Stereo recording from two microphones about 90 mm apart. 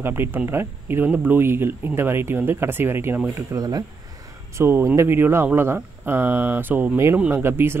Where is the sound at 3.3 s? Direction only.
40° right (ahead or behind).